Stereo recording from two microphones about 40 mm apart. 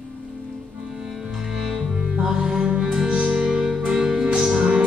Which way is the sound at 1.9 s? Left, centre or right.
Right.